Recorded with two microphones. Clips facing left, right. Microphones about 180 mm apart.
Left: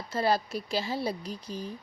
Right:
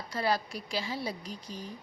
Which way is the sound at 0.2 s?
30° left (ahead or behind).